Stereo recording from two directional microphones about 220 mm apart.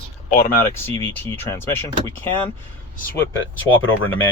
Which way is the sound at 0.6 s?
10° left (ahead or behind).